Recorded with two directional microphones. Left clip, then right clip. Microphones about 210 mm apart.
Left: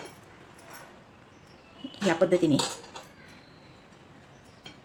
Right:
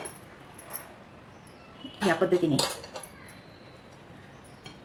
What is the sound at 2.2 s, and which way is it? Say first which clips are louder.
Speech: left 3 dB; 40° left (ahead or behind).